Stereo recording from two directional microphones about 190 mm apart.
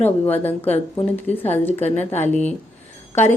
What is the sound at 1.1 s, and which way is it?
Speech, 10° left (ahead or behind).